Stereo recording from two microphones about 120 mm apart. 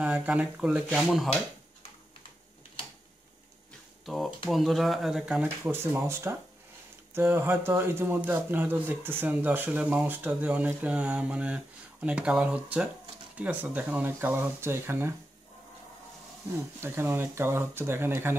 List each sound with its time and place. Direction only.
0.0 s speech: 10° right (ahead or behind)
4.0 s speech: centre (ahead or behind); by 15.1 s 20° right (ahead or behind)
16.8 s speech: 20° right (ahead or behind)